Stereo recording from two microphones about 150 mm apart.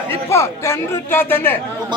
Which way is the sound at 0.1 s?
20° left (ahead or behind).